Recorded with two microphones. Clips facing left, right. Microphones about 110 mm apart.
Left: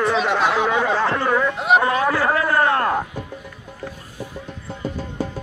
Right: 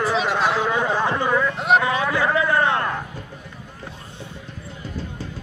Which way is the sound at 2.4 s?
20° right (ahead or behind).